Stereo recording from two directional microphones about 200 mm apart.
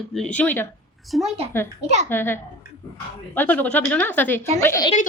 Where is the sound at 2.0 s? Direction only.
10° left (ahead or behind).